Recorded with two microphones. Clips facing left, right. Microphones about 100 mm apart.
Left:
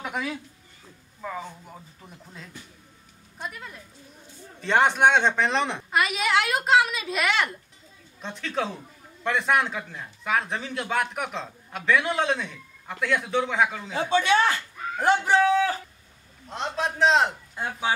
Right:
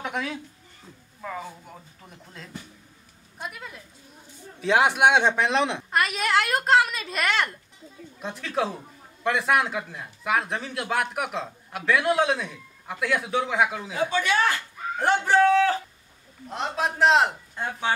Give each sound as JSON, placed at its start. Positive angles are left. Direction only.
{"t": 0.0, "sound": "a sound", "side_deg": 0}
{"t": 1.2, "sound": "speech", "side_deg": 0}
{"t": 14.1, "sound": "speech", "side_deg": 20}
{"t": 15.0, "sound": "speech", "side_deg": 5}